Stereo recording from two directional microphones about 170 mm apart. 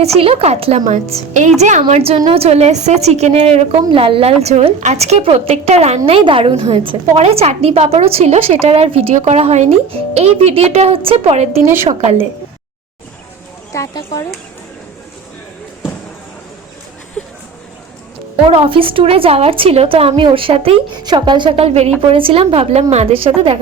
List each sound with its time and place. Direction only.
0.0 s a woman's voice: 35° right (ahead or behind)
13.7 s speech: 20° left (ahead or behind)
17.2 s a sound: 5° left (ahead or behind)
18.4 s a woman's voice: 30° right (ahead or behind)